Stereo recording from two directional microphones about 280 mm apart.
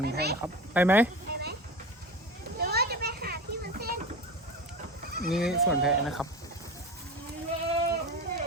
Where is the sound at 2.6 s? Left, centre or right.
Right.